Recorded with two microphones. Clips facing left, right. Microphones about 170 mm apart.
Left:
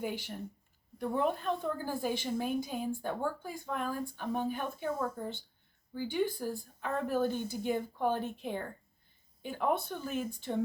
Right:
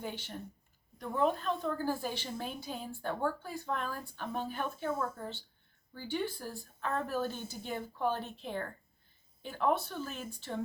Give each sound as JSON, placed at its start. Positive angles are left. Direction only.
{"t": 0.0, "sound": "speech", "side_deg": 10}